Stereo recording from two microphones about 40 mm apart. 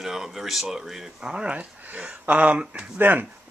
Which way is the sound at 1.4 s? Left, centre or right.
Right.